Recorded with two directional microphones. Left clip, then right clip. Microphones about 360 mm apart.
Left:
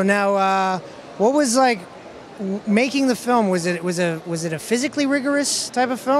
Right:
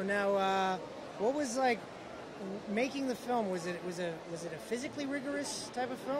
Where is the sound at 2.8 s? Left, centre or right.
Left.